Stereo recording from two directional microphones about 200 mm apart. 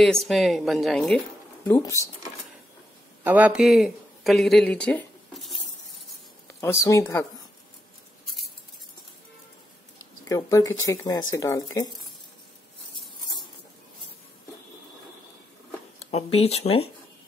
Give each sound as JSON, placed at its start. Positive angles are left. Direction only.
{"t": 0.0, "sound": "a woman's voice", "side_deg": 0}
{"t": 1.6, "sound": "speech", "side_deg": 15}
{"t": 3.3, "sound": "speech", "side_deg": -10}
{"t": 6.9, "sound": "speech", "side_deg": 15}
{"t": 10.2, "sound": "speech", "side_deg": 15}
{"t": 16.1, "sound": "speech", "side_deg": 30}